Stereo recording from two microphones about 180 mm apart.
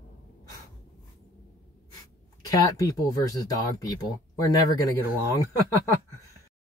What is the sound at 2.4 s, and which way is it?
Speech, 20° left (ahead or behind).